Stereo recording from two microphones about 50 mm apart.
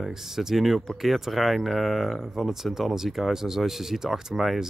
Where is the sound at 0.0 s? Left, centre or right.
Centre.